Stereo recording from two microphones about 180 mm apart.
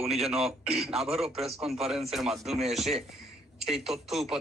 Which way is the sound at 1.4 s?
35° right (ahead or behind).